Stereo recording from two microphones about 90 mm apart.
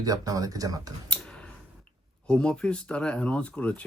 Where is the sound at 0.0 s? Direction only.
45° right (ahead or behind).